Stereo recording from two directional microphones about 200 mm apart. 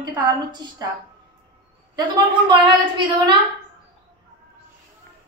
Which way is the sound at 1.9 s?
20° right (ahead or behind).